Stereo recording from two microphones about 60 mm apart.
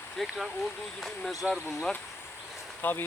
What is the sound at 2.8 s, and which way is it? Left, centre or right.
Speech, left.